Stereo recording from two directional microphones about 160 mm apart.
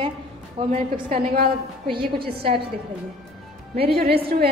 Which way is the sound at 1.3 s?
70° right (ahead or behind).